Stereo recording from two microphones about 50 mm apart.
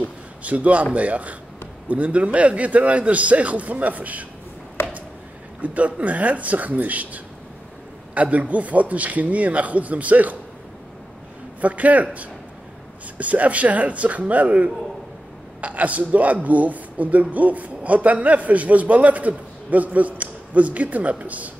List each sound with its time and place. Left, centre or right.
0.0 s a man's voice: right
4.8 s a sound: left
5.6 s a man's voice: right
11.6 s a man's voice: right